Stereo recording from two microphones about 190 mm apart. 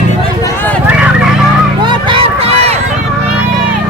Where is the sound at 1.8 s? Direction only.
25° right (ahead or behind).